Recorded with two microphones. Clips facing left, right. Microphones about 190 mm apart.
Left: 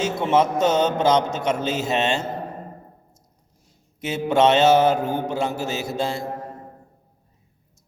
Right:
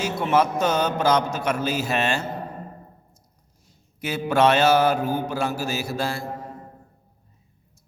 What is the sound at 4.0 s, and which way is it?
A man's voice, 20° left (ahead or behind).